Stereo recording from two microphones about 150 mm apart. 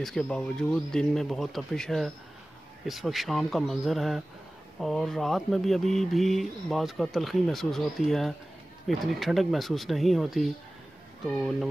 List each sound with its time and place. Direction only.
0.0 s speech: 5° left (ahead or behind)